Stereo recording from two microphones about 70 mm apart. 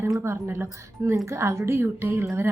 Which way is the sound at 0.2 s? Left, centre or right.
Right.